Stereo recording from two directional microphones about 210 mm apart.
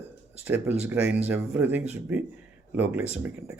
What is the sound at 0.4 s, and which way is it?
Speech, 10° right (ahead or behind).